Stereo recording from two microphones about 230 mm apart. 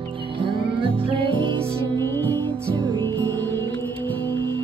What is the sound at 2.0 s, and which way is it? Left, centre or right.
Music, centre.